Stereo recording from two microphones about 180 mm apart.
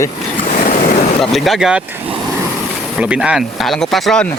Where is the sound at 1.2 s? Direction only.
Centre (ahead or behind).